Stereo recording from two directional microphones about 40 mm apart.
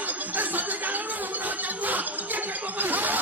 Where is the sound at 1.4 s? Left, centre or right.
Right.